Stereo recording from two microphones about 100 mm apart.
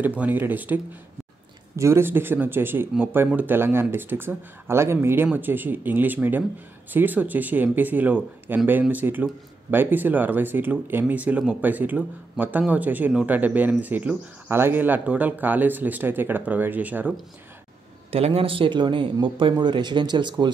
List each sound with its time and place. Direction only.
0.0 s speech: 15° right (ahead or behind)
1.8 s speech: 25° right (ahead or behind)
18.1 s speech: 75° right (ahead or behind); by 20.4 s 50° right (ahead or behind)